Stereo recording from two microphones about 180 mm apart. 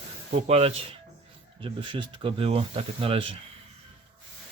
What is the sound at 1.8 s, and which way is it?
Speech, 25° right (ahead or behind).